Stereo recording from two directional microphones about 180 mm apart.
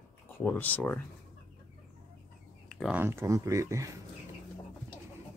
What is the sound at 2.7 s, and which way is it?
Speech, 5° right (ahead or behind).